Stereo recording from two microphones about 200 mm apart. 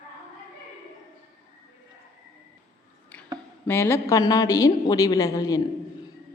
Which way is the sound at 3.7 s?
10° left (ahead or behind).